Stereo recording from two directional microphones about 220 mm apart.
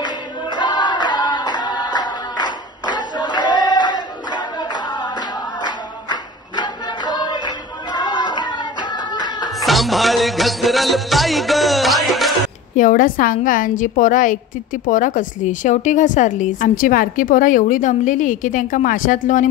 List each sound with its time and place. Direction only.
0.0 s choir: 20° left (ahead or behind)
2.8 s a sound: 20° left (ahead or behind)
5.1 s music: 20° left (ahead or behind)
9.6 s music: centre (ahead or behind)
12.7 s a woman's voice: 35° left (ahead or behind)